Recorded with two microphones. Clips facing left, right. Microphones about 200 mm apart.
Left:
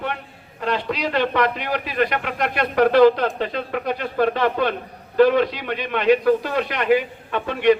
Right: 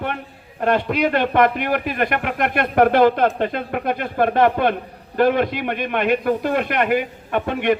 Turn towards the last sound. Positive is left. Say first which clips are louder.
# left 2 dB
turn(degrees=-55)  # may be behind; listen again after turning